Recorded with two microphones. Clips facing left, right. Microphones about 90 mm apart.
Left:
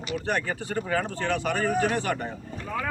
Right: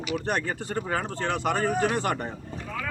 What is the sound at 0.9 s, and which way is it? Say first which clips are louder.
Speech: left 2 dB; 30° right (ahead or behind).